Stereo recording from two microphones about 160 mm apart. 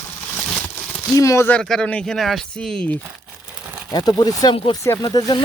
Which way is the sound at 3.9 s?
25° left (ahead or behind).